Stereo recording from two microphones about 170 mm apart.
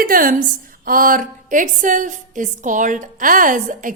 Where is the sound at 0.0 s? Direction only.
55° right (ahead or behind).